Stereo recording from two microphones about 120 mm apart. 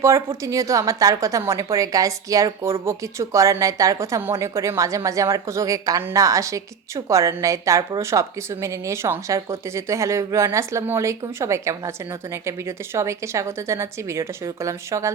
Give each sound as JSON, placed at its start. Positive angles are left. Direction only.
{"t": 0.0, "sound": "a woman's voice", "side_deg": -25}